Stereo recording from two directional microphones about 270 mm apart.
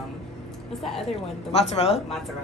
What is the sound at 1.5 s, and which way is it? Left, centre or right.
Speech, left.